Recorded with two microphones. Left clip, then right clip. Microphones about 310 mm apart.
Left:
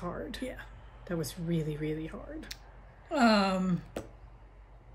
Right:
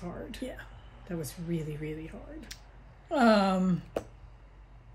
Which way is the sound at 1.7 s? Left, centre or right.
Left.